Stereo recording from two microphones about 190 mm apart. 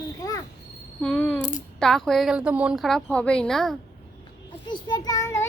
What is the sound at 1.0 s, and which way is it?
A child's voice, 10° left (ahead or behind).